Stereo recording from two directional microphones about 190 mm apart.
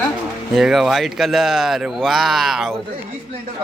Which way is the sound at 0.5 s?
Centre (ahead or behind).